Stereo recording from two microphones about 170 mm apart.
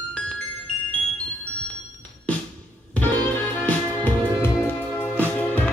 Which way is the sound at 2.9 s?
10° left (ahead or behind).